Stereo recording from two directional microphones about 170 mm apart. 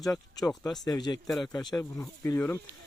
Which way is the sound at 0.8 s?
25° left (ahead or behind).